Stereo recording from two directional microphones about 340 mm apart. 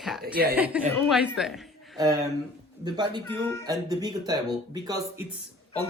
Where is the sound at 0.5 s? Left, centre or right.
Centre.